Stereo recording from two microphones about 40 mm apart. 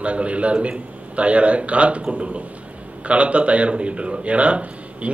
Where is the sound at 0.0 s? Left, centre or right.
Right.